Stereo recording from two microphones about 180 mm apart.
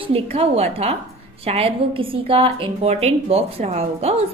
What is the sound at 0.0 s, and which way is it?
A woman's voice, 30° right (ahead or behind).